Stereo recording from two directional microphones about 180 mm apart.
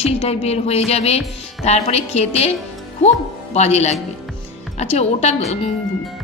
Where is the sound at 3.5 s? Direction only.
35° left (ahead or behind).